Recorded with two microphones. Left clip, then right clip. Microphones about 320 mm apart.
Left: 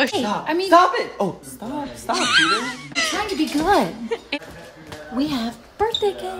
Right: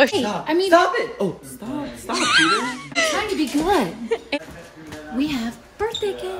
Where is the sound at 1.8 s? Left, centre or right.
Centre.